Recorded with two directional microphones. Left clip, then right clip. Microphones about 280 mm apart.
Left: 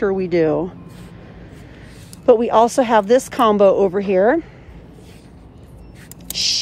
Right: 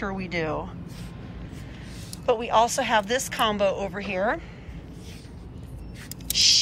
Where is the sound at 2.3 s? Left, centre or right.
Left.